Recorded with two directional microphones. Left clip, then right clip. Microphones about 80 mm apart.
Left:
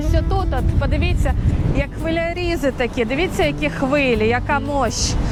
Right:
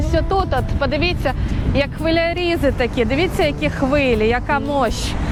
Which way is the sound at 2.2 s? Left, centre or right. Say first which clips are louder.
Right 1 dB; centre.